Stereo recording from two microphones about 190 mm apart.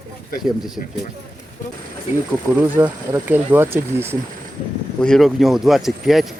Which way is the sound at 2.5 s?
10° right (ahead or behind).